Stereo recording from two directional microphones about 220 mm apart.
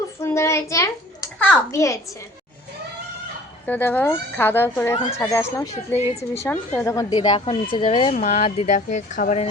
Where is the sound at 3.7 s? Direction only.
10° left (ahead or behind).